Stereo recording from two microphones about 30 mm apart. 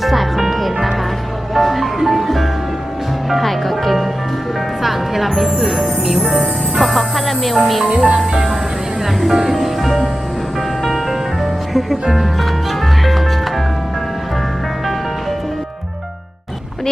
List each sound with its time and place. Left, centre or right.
0.0 s music: centre
5.5 s music: centre
6.7 s music: centre
7.9 s speech: right
9.2 s music: centre